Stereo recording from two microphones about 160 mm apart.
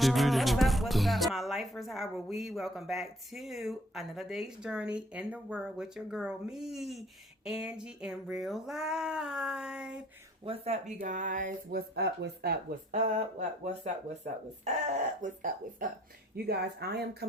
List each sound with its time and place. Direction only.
0.0 s speech: centre (ahead or behind)
10.4 s speech: 35° right (ahead or behind); by 13.0 s 75° right (ahead or behind)
14.6 s speech: 50° right (ahead or behind)
16.3 s speech: 90° right